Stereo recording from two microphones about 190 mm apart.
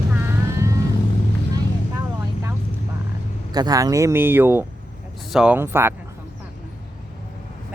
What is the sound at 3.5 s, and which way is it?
Speech, 20° right (ahead or behind).